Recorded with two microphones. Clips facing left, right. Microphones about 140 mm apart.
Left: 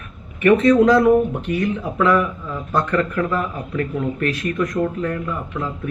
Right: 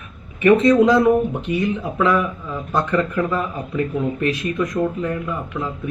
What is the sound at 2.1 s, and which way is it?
A man's voice, 10° right (ahead or behind).